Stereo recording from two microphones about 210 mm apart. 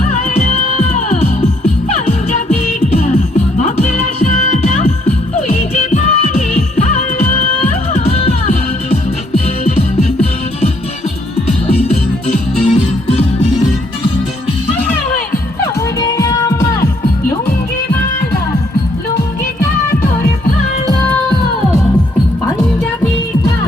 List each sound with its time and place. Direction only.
0.1 s music: 35° left (ahead or behind)
16.0 s music: 15° left (ahead or behind)